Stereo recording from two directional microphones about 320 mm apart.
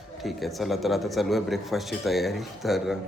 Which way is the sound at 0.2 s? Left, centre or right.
Centre.